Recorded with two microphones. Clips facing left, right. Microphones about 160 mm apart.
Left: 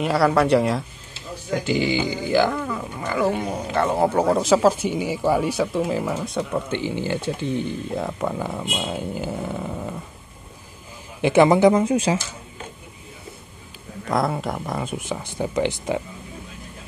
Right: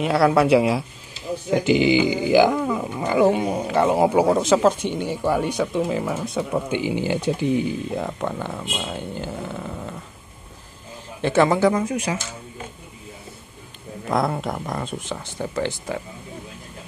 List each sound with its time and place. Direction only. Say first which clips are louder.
0.0 s speech: right 1 dB; centre (ahead or behind)
1.5 s speech: right 4 dB; 20° right (ahead or behind)
4.3 s speech: even; centre (ahead or behind)
6.7 s speech: right 2 dB; 15° right (ahead or behind); by 9.9 s 10° left (ahead or behind)
11.1 s speech: left 3 dB; 15° left (ahead or behind)
14.0 s speech: even; centre (ahead or behind); by 16.0 s 15° left (ahead or behind)